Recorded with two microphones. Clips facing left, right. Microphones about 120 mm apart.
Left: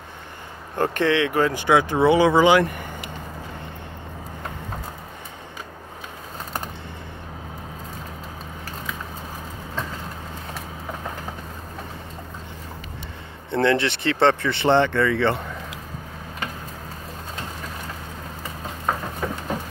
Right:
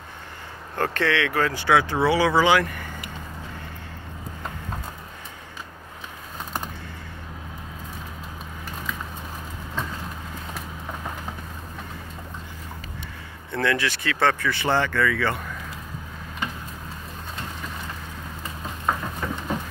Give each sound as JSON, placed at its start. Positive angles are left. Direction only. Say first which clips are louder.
{"t": 0.7, "sound": "speech", "louder": "left 3 dB", "side_deg": 15}
{"t": 13.5, "sound": "speech", "louder": "left 4 dB", "side_deg": 25}
{"t": 18.9, "sound": "a sound", "louder": "left 1 dB", "side_deg": 5}